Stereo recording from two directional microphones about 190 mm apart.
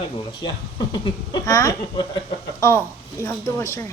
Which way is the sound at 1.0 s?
20° left (ahead or behind).